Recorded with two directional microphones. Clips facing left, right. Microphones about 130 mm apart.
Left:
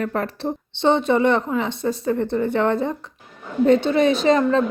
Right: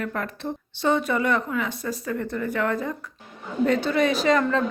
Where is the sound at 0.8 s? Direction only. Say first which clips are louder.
Left 5 dB; 25° left (ahead or behind).